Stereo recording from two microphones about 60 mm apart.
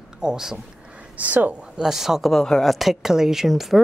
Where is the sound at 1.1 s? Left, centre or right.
Right.